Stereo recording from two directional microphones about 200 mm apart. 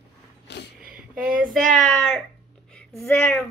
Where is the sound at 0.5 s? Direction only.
60° left (ahead or behind).